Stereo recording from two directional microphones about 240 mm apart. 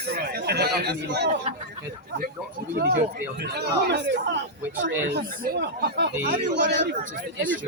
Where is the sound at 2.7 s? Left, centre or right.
Right.